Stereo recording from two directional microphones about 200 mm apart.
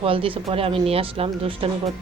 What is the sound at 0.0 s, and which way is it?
Speech, 25° right (ahead or behind).